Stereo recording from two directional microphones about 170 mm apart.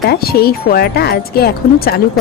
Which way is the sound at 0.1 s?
65° left (ahead or behind).